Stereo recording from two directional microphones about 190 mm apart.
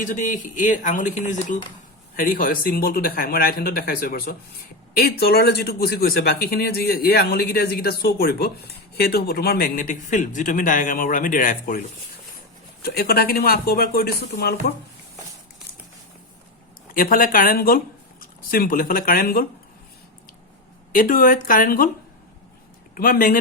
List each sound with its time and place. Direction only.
0.0 s speech: 40° left (ahead or behind)
12.8 s speech: 55° left (ahead or behind)
16.9 s speech: 50° left (ahead or behind)
20.9 s speech: 45° left (ahead or behind)
23.0 s speech: 45° left (ahead or behind)